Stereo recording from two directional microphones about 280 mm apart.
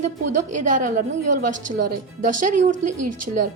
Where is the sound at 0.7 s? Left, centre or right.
Right.